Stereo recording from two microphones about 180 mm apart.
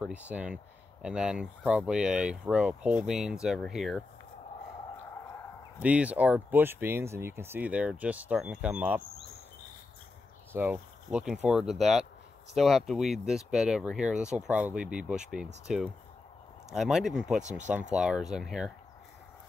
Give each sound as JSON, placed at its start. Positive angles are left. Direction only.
{"t": 0.0, "sound": "speech", "side_deg": -5}
{"t": 5.8, "sound": "speech", "side_deg": -10}
{"t": 10.5, "sound": "speech", "side_deg": -10}
{"t": 17.4, "sound": "speech", "side_deg": -40}
{"t": 17.9, "sound": "speech", "side_deg": -5}